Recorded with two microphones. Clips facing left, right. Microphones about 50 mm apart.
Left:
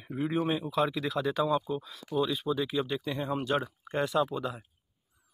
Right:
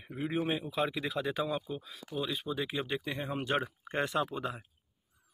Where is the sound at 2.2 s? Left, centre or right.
Centre; by 4.6 s right.